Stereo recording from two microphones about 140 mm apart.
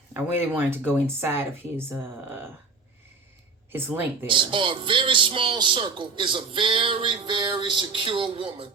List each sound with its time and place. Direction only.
0.1 s speech: 15° right (ahead or behind)
3.7 s speech: 15° right (ahead or behind)
4.3 s a man's voice: 35° right (ahead or behind)